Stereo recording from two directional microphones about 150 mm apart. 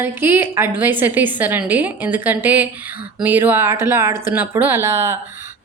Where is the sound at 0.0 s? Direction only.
15° right (ahead or behind).